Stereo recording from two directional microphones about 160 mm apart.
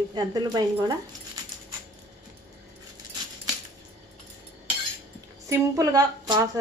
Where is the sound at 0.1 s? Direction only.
25° right (ahead or behind).